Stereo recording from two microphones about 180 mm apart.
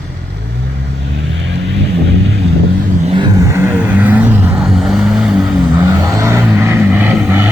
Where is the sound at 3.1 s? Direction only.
25° right (ahead or behind); by 5.5 s centre (ahead or behind).